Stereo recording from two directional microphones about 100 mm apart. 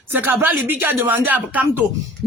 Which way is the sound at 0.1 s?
20° right (ahead or behind).